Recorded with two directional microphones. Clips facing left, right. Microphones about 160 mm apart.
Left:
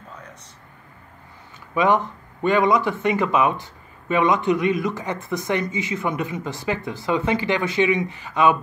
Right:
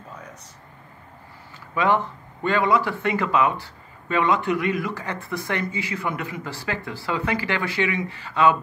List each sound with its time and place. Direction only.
1.8 s speech: 15° left (ahead or behind)